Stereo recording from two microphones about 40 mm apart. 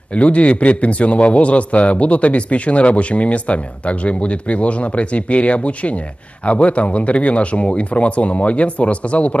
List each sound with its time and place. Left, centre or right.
0.1 s a man's voice: left